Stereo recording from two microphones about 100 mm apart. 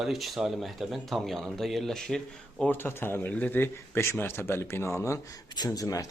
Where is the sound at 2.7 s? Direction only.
20° left (ahead or behind).